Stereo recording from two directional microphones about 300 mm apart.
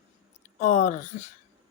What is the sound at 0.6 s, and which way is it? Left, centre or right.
Speech, left.